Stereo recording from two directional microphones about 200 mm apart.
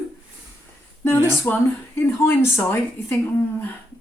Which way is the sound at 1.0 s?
10° left (ahead or behind).